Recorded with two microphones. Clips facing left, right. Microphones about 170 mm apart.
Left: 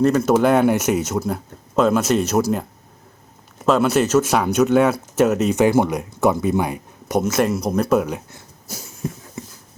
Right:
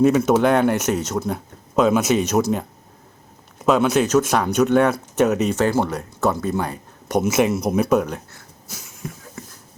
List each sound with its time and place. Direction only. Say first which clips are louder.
0.0 s speech: even; centre (ahead or behind)
3.7 s speech: even; 5° left (ahead or behind)
7.2 s speech: right 1 dB; 5° right (ahead or behind)
8.7 s a sound: left 5 dB; 35° left (ahead or behind)